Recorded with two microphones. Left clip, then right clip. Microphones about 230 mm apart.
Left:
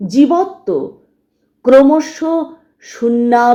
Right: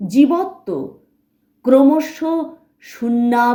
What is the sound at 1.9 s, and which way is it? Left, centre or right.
Speech, right.